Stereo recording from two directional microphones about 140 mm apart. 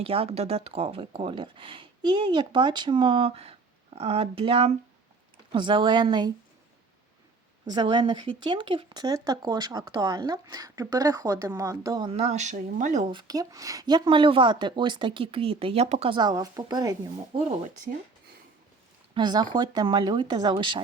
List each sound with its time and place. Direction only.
0.0 s speech: 40° right (ahead or behind)
7.7 s speech: 30° right (ahead or behind)
12.0 s speech: 45° right (ahead or behind)
13.1 s speech: 30° right (ahead or behind); by 16.1 s 50° right (ahead or behind)
16.1 s speech: 30° right (ahead or behind)
19.1 s speech: 30° right (ahead or behind)